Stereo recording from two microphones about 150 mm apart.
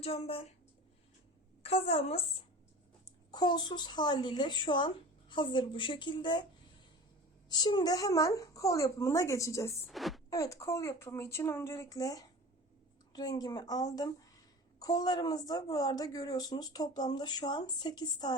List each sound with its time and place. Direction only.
0.0 s speech: 40° left (ahead or behind)
1.6 s a woman's voice: 40° left (ahead or behind)
3.0 s a child's voice: 30° left (ahead or behind)
7.5 s speech: 30° left (ahead or behind)
9.8 s a woman's voice: centre (ahead or behind)
10.2 s speech: 20° left (ahead or behind)